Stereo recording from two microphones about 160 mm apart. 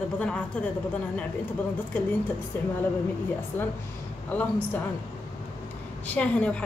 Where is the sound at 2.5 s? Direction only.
10° left (ahead or behind).